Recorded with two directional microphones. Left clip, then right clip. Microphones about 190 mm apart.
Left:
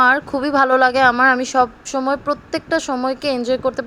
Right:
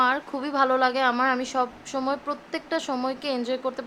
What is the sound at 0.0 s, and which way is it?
Speech, 25° left (ahead or behind).